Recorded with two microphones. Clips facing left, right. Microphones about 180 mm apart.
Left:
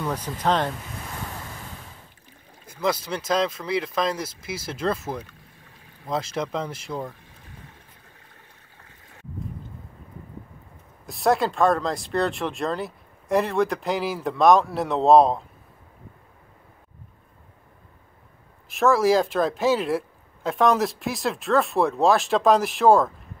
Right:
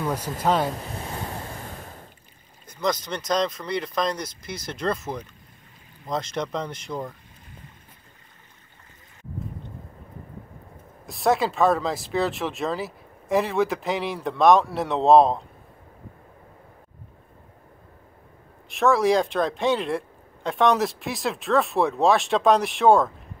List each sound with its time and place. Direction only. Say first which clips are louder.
0.0 s speech: right 1 dB; 10° right (ahead or behind)
1.0 s waves: right 2 dB; 30° right (ahead or behind)
2.6 s speech: left 1 dB; 5° left (ahead or behind)
11.1 s speech: even; centre (ahead or behind)
18.7 s speech: left 1 dB; centre (ahead or behind)